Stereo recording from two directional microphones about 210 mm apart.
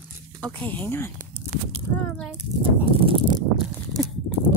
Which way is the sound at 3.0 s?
25° right (ahead or behind).